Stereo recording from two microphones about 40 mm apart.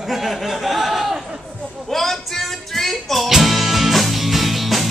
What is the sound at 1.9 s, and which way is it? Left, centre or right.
Music, centre.